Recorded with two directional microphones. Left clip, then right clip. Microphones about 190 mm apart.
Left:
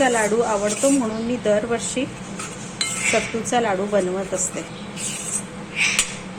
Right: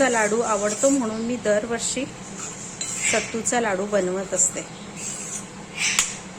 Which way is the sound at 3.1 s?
15° right (ahead or behind).